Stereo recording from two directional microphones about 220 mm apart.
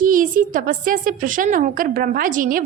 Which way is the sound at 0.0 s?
40° right (ahead or behind).